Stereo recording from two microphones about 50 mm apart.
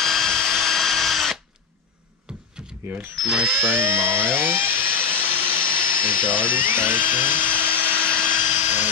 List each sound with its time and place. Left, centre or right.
0.0 s drill: centre
3.2 s speech: centre
3.6 s a sound: right